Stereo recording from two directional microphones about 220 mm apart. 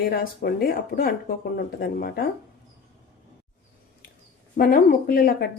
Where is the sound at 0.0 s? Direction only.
45° left (ahead or behind).